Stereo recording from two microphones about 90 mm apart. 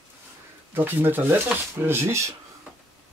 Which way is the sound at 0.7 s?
25° right (ahead or behind).